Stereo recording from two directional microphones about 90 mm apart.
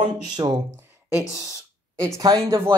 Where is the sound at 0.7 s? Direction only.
25° right (ahead or behind).